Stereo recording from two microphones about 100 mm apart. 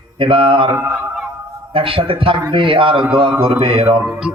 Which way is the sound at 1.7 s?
65° right (ahead or behind).